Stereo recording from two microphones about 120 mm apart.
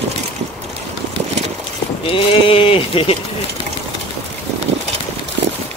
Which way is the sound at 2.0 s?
50° left (ahead or behind).